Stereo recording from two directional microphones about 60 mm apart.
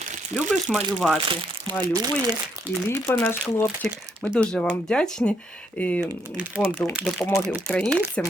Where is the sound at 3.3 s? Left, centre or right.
Left.